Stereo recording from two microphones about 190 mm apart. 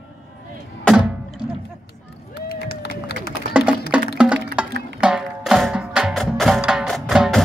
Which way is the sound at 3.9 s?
5° right (ahead or behind).